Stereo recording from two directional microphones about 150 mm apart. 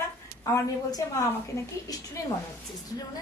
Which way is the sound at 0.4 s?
20° left (ahead or behind).